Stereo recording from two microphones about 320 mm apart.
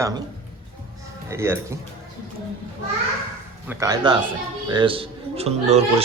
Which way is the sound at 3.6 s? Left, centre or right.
Centre.